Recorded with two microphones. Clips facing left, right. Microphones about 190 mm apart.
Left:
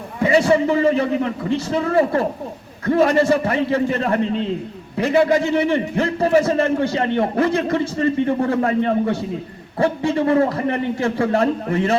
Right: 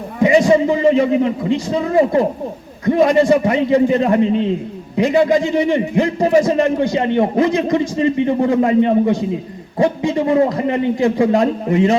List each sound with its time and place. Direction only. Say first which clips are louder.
0.2 s a man's voice: right 4 dB; 15° right (ahead or behind)